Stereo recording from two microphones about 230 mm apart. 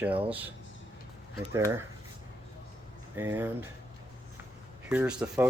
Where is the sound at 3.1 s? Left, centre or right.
Centre.